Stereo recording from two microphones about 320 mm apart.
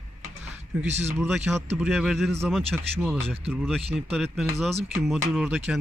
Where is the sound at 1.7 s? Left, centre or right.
Centre.